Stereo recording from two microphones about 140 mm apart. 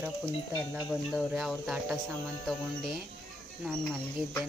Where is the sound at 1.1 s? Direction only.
Centre (ahead or behind).